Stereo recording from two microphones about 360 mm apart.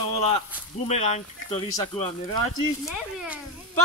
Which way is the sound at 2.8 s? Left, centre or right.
Centre.